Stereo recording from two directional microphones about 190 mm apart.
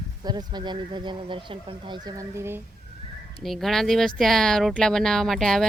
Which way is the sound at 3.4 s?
Centre (ahead or behind).